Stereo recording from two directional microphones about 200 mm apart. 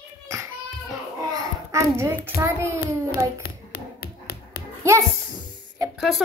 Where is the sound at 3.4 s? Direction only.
50° left (ahead or behind).